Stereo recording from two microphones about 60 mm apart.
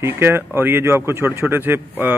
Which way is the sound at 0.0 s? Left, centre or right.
Right.